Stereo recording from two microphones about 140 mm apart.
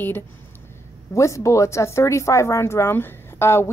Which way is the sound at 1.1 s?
20° left (ahead or behind).